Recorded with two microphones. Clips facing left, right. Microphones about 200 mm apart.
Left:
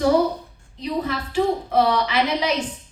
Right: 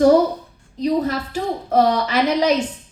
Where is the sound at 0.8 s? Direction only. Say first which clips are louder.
Right 6 dB; 45° right (ahead or behind).